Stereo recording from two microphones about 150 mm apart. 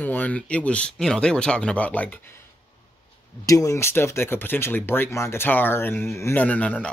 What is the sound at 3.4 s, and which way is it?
Speech, 20° left (ahead or behind).